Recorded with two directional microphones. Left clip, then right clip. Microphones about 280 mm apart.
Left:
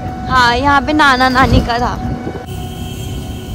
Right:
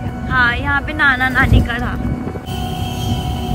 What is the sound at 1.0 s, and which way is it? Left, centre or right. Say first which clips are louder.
Speech: left 1 dB; centre.